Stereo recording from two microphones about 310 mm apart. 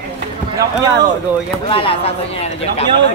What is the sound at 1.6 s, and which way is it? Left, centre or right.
Speech, centre.